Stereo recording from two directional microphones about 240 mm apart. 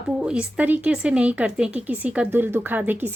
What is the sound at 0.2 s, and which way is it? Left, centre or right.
Speech, centre.